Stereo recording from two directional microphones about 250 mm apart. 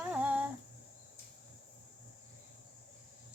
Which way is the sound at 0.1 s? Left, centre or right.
Centre.